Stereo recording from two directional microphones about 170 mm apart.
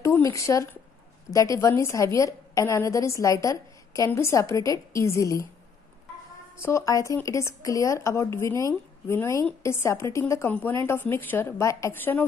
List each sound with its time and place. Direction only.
0.0 s a woman's voice: 15° left (ahead or behind)
6.6 s a woman's voice: 15° left (ahead or behind)